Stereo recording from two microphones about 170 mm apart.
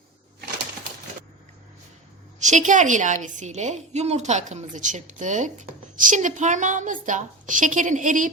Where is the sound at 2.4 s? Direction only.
45° right (ahead or behind).